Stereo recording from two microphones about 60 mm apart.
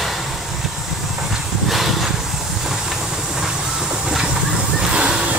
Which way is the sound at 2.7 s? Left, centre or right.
Centre.